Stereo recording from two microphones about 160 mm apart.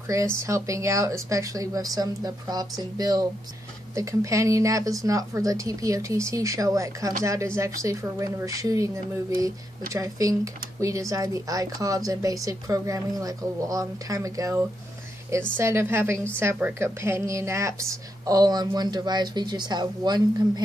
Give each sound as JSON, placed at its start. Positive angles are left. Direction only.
{"t": 0.1, "sound": "a woman's voice", "side_deg": -20}